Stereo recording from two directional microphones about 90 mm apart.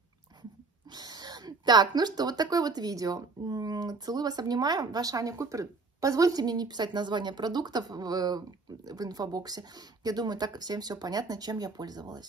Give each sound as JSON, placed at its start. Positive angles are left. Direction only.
{"t": 0.9, "sound": "speech", "side_deg": -50}